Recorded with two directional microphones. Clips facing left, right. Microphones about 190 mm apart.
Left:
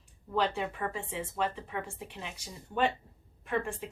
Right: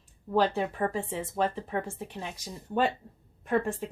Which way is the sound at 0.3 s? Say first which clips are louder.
Right 5 dB; 40° right (ahead or behind).